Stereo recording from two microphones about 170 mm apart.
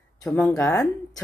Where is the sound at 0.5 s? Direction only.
15° left (ahead or behind).